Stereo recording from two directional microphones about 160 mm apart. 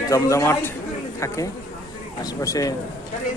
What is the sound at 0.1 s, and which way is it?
Speech, 20° left (ahead or behind).